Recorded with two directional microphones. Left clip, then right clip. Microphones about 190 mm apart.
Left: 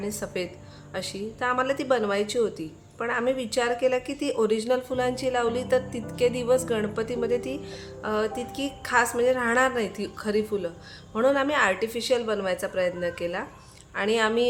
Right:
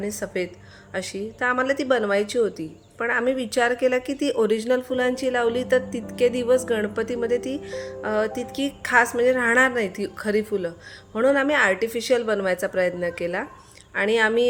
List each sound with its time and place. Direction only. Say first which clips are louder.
0.0 s a woman's voice: right 3 dB; 20° right (ahead or behind)